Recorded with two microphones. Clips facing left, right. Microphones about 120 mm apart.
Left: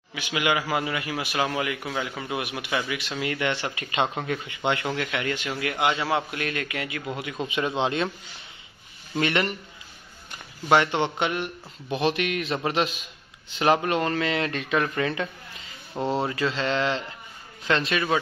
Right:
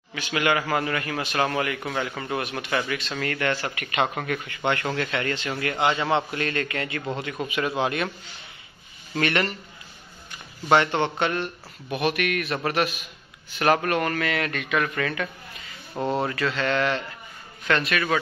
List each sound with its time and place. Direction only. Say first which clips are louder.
0.1 s a man's voice: right 2 dB; 10° left (ahead or behind)
7.4 s a man's voice: even; 25° left (ahead or behind)
9.1 s a man's voice: even; 20° left (ahead or behind)
10.7 s a man's voice: right 1 dB; 15° left (ahead or behind)